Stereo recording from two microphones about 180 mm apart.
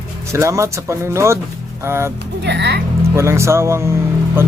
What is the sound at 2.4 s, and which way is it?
Speech, 70° right (ahead or behind).